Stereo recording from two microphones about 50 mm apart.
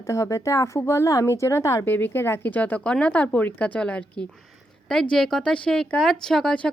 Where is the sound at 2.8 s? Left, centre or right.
Left.